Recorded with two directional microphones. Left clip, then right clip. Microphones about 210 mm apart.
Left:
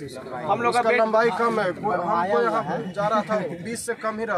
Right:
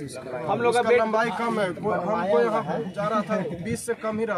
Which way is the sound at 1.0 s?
15° right (ahead or behind).